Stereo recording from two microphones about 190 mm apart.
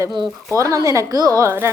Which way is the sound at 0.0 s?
25° right (ahead or behind).